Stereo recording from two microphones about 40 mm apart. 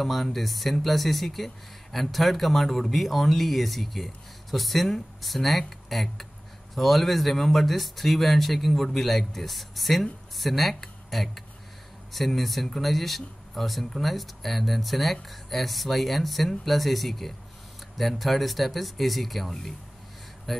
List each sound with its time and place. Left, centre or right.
0.0 s speech: centre